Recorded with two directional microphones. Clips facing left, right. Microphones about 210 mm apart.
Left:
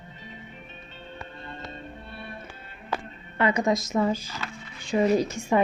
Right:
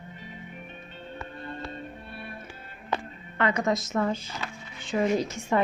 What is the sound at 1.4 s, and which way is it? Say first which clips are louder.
Music: right 3 dB; 25° left (ahead or behind).